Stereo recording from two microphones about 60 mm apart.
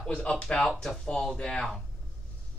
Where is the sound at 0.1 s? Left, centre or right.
Centre.